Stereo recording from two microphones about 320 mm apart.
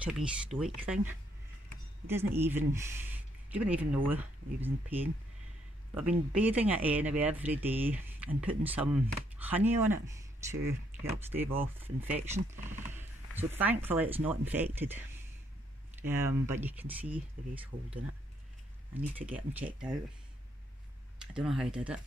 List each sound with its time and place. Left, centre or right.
0.0 s speech: centre
18.9 s speech: centre
21.2 s speech: centre